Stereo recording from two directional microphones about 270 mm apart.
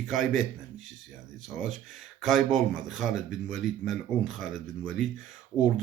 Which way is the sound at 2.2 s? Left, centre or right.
Centre.